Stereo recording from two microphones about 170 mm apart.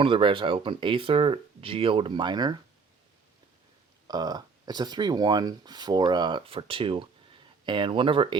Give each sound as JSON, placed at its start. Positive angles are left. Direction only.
{"t": 0.0, "sound": "speech", "side_deg": -30}
{"t": 4.0, "sound": "speech", "side_deg": -25}